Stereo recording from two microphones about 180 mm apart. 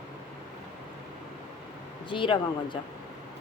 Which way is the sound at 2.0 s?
25° left (ahead or behind).